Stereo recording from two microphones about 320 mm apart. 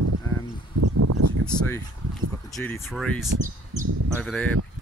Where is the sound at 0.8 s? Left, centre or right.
Right.